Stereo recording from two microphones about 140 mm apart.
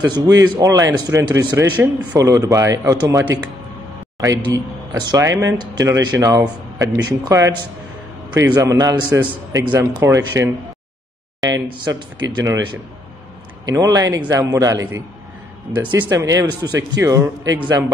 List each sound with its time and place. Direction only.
0.0 s speech: 30° right (ahead or behind)
8.6 s speech: 25° right (ahead or behind)
11.4 s speech: 30° right (ahead or behind)
13.7 s speech: 25° right (ahead or behind)
16.2 s speech: 25° right (ahead or behind)